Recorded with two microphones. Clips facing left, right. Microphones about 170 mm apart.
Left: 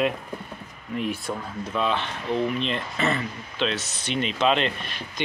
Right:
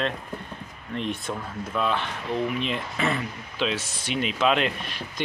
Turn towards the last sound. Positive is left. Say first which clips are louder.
# even
turn(degrees=-5)  # may be behind; listen again after turning